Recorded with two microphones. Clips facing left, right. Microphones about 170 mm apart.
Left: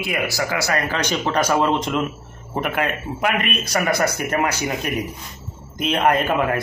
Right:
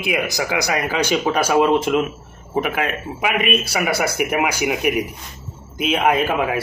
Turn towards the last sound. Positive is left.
turn(degrees=-5)  # may be behind; listen again after turning